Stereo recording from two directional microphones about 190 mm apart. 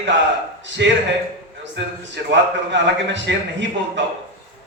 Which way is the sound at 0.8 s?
65° right (ahead or behind).